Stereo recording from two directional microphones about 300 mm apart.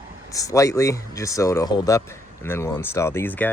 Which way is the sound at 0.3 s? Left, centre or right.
Centre.